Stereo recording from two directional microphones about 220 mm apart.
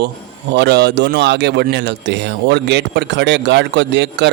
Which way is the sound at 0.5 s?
50° right (ahead or behind).